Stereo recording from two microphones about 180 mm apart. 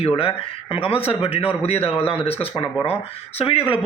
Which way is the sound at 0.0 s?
30° left (ahead or behind).